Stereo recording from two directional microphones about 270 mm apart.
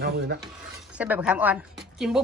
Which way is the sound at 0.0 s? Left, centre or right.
Right.